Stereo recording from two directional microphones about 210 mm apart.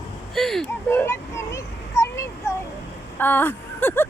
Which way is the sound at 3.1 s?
10° left (ahead or behind).